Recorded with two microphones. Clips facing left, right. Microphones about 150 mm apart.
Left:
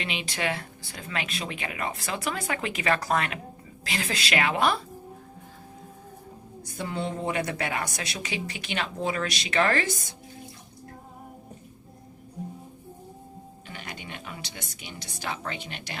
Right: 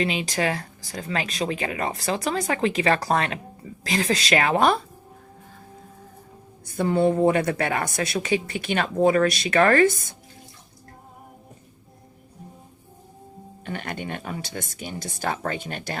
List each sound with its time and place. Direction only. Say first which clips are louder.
0.0 s speech: right 7 dB; 40° right (ahead or behind)
6.7 s a woman's voice: right 11 dB; 50° right (ahead or behind)
13.7 s a woman's voice: right 10 dB; 55° right (ahead or behind)